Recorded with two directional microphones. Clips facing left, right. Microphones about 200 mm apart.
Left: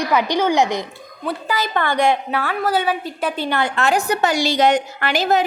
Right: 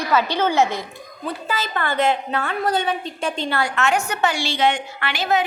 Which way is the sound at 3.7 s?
35° left (ahead or behind).